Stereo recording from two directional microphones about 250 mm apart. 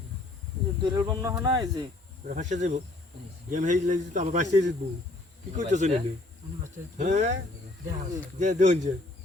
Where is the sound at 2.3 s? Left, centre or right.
Right.